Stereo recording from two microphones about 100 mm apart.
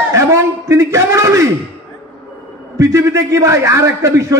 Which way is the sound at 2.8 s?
30° right (ahead or behind).